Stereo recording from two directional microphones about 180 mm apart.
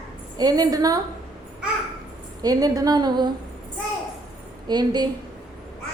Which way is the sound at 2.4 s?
20° right (ahead or behind).